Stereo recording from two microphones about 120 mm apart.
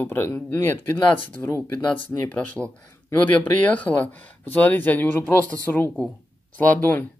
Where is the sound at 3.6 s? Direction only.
10° left (ahead or behind).